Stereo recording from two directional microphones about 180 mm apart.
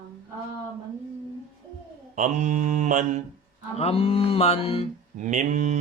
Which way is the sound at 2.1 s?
45° right (ahead or behind).